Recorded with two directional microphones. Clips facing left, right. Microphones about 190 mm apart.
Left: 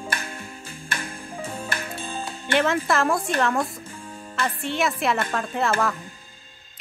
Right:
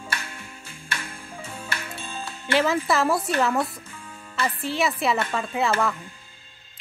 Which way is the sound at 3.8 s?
35° left (ahead or behind).